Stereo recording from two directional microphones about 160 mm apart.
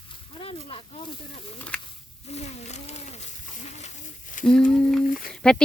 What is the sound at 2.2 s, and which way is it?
Wild animals, 40° left (ahead or behind).